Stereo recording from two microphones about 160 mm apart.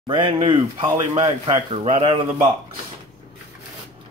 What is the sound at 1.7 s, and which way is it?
Speech, 40° right (ahead or behind).